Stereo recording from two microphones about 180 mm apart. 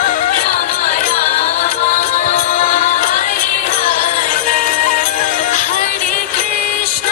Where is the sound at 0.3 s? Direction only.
45° left (ahead or behind).